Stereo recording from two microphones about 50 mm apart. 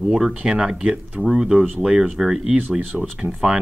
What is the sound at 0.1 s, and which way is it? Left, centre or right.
Speech, centre.